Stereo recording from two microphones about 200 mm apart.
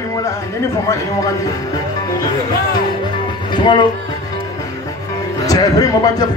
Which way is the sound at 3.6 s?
25° left (ahead or behind).